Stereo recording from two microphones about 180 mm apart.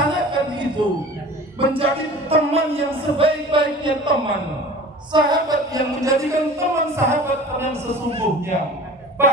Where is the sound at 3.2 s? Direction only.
30° right (ahead or behind).